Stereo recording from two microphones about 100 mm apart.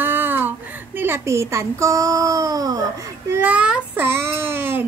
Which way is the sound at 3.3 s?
15° right (ahead or behind).